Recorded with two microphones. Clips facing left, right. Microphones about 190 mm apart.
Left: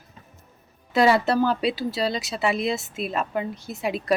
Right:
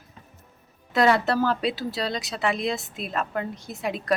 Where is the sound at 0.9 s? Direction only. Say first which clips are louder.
Left 2 dB; centre (ahead or behind).